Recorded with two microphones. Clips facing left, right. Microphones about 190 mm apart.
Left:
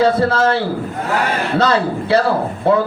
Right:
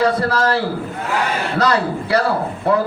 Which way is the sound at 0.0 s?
25° left (ahead or behind).